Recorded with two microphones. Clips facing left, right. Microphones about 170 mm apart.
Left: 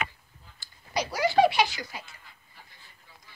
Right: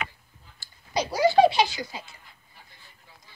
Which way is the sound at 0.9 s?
30° right (ahead or behind).